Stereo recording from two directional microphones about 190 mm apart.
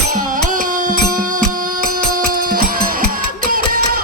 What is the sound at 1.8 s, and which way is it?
Music, 50° right (ahead or behind).